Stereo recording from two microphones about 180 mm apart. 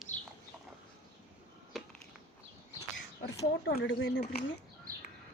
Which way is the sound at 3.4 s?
75° left (ahead or behind).